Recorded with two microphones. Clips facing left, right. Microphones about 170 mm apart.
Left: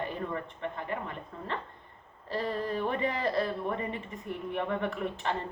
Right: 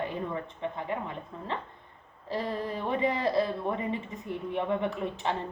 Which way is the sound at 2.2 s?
10° right (ahead or behind).